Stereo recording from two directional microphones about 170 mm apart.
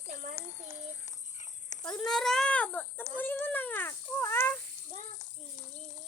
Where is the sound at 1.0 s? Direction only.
45° left (ahead or behind).